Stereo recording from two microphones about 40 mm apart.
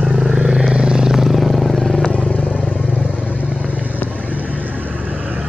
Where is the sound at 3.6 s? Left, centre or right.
Right.